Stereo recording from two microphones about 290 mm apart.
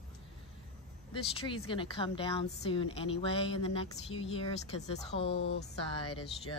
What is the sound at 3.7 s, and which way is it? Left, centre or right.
Female singing, centre.